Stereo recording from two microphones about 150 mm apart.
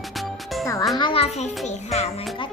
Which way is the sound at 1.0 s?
35° left (ahead or behind).